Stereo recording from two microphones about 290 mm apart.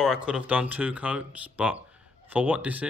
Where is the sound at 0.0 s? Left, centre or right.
Centre.